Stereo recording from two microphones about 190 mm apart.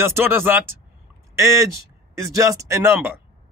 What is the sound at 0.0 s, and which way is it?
Speech, 10° right (ahead or behind).